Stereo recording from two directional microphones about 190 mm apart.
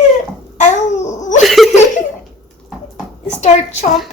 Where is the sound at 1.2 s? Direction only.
40° left (ahead or behind).